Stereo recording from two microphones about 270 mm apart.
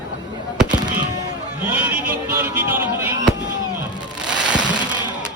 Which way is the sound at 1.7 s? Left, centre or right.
Centre.